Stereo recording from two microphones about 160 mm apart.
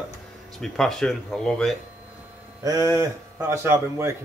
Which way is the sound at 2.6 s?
20° right (ahead or behind).